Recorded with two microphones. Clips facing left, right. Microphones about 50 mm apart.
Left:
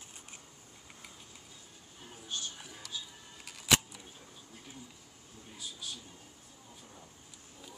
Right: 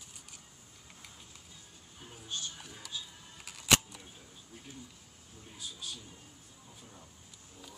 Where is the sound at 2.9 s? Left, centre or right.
Centre.